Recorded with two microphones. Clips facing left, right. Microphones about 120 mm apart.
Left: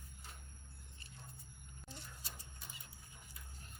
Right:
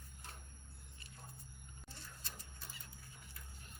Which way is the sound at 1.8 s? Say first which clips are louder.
Left 3 dB; 15° left (ahead or behind).